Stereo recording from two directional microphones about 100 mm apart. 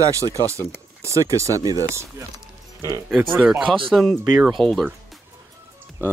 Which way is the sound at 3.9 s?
5° left (ahead or behind).